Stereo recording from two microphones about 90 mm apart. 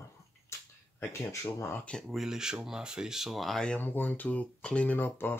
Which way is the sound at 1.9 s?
Centre (ahead or behind).